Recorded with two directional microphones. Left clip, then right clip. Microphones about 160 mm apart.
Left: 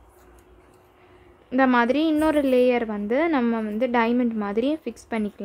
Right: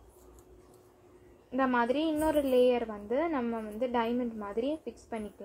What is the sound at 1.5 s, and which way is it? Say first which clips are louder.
A woman's voice: left 9 dB; 55° left (ahead or behind).